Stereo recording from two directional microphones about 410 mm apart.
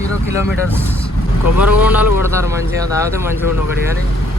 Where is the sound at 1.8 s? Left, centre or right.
Centre.